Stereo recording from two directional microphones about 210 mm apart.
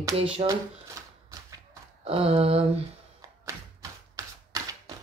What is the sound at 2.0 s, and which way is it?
Speech, 30° right (ahead or behind).